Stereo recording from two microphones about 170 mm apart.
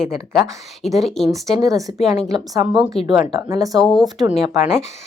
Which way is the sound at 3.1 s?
20° right (ahead or behind).